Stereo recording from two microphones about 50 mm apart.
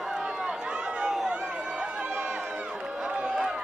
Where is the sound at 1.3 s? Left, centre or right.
Centre.